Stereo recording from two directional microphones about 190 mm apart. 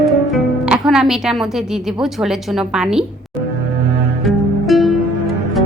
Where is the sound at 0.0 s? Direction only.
Centre (ahead or behind).